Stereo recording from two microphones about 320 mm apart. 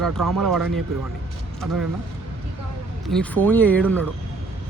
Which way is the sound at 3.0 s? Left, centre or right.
Centre.